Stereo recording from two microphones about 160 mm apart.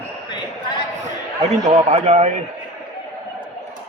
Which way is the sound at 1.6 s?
45° right (ahead or behind).